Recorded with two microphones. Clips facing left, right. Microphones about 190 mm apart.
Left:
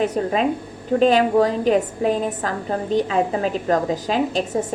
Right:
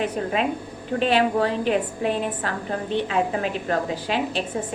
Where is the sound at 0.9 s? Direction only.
40° left (ahead or behind).